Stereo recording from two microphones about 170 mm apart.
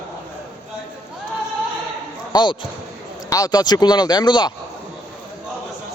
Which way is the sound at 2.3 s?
25° left (ahead or behind).